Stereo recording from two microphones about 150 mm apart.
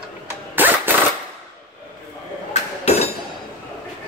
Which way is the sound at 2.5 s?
45° left (ahead or behind).